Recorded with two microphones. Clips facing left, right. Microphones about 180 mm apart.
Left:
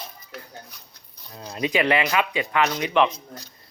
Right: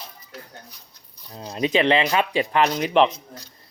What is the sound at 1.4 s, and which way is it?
A man's voice, 25° right (ahead or behind).